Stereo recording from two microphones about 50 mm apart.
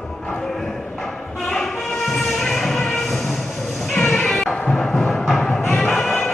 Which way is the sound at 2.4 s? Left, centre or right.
Centre.